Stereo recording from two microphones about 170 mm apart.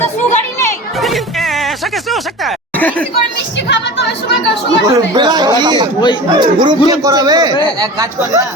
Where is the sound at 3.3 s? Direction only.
90° left.